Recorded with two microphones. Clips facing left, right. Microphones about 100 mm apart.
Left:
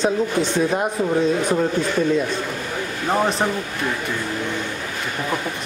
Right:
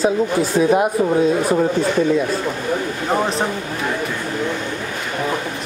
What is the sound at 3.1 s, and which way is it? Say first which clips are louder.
Speech: even; centre (ahead or behind).